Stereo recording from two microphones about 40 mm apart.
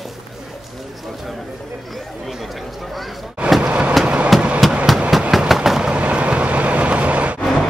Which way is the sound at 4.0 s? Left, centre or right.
Right.